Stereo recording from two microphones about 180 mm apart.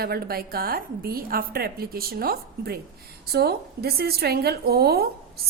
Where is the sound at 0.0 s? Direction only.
60° right (ahead or behind).